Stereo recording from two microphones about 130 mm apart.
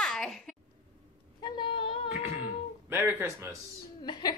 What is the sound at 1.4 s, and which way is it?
Speech, 40° left (ahead or behind).